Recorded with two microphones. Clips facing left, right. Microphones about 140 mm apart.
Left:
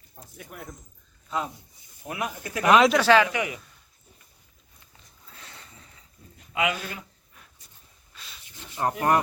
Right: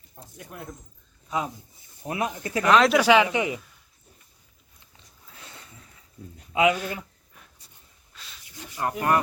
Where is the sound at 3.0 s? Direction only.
15° right (ahead or behind).